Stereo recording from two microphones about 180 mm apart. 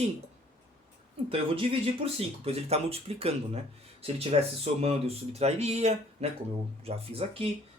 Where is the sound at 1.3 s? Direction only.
30° right (ahead or behind).